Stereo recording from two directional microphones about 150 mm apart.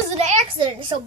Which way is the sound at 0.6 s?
30° right (ahead or behind).